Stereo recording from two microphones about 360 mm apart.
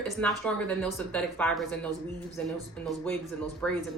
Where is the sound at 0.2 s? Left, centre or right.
Centre.